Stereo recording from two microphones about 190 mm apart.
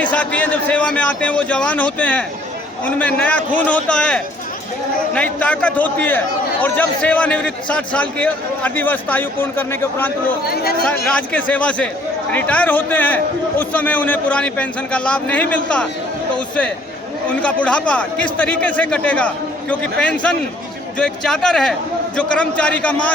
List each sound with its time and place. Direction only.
0.0 s a man's voice: 10° left (ahead or behind)
10.4 s speech: 55° left (ahead or behind)
10.8 s a man's voice: 5° left (ahead or behind)